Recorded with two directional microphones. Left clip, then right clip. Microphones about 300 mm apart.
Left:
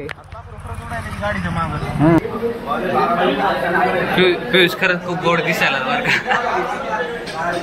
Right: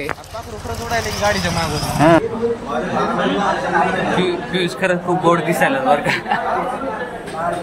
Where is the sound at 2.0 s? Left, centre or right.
Centre.